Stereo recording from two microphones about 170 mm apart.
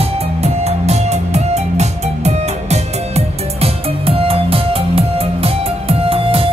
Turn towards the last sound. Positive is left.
turn(degrees=-35)  # may be behind; listen again after turning